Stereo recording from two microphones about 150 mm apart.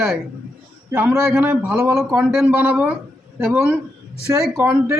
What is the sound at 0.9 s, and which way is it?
A man's voice, 15° right (ahead or behind).